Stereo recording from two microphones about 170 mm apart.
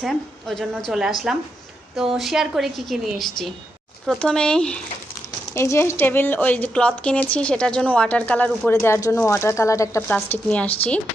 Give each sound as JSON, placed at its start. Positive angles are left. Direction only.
{"t": 0.0, "sound": "a woman's voice", "side_deg": 0}